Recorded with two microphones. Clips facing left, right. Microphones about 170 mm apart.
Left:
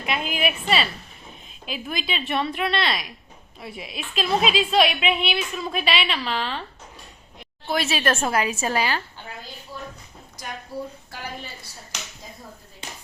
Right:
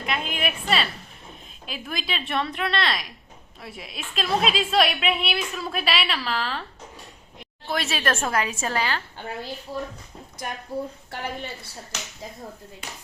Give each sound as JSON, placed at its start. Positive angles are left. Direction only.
{"t": 0.0, "sound": "a woman's voice", "side_deg": 5}
{"t": 7.7, "sound": "a woman's voice", "side_deg": 5}
{"t": 9.7, "sound": "speech", "side_deg": -60}
{"t": 10.7, "sound": "a woman's voice", "side_deg": -20}